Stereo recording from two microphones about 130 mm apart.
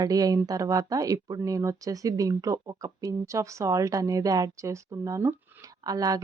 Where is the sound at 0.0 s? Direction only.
30° right (ahead or behind).